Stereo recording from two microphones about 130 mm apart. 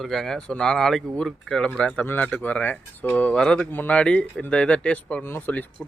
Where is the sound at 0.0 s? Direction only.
Centre (ahead or behind).